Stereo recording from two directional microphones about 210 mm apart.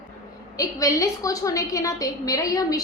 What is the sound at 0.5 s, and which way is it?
A woman's voice, 15° left (ahead or behind).